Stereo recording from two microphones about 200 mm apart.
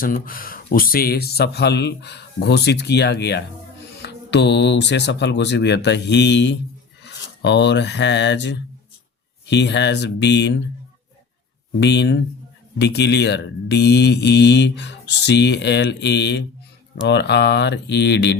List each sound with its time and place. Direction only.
0.0 s speech: 45° left (ahead or behind)
11.8 s speech: 60° left (ahead or behind)